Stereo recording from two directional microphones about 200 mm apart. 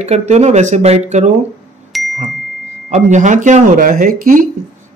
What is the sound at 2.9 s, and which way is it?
Speech, 35° right (ahead or behind).